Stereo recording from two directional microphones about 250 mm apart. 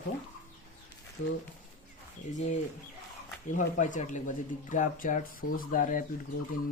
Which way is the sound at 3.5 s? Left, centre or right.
Left.